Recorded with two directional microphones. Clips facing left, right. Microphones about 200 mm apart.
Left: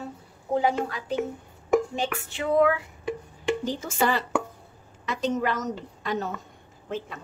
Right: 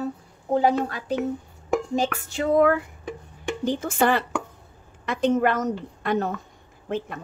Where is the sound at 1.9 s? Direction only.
40° right (ahead or behind).